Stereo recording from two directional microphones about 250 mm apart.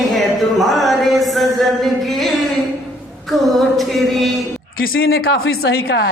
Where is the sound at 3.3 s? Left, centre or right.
Centre.